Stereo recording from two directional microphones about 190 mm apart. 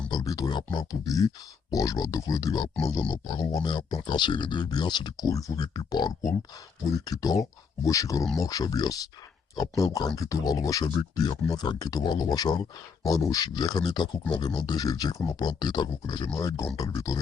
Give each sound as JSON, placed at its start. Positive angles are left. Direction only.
{"t": 0.1, "sound": "speech", "side_deg": 20}